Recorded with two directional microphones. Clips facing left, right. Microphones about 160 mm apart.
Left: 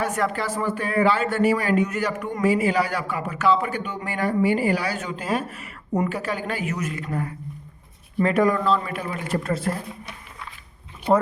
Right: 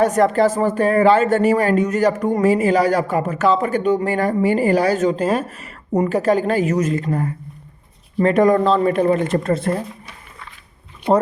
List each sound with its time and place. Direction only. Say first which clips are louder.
0.0 s speech: right 10 dB; 40° right (ahead or behind)
9.0 s speech: right 11 dB; 50° right (ahead or behind)